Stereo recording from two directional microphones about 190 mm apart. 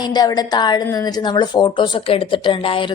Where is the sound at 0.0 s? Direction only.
20° left (ahead or behind).